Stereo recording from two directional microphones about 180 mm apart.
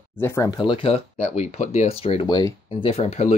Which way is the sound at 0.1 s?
15° left (ahead or behind).